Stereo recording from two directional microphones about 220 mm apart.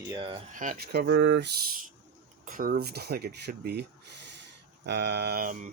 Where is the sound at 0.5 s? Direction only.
40° right (ahead or behind).